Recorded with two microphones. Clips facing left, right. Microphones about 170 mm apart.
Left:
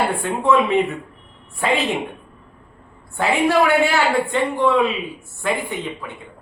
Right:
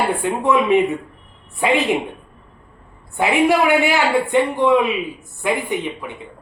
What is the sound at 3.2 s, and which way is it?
A man's voice, 15° right (ahead or behind).